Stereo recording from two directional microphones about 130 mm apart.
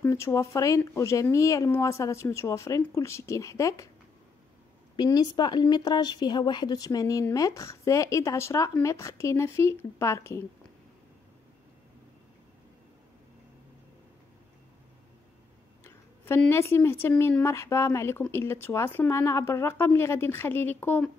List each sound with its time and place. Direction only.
0.0 s speech: 25° left (ahead or behind)
4.9 s speech: 35° left (ahead or behind)
16.4 s speech: 20° left (ahead or behind)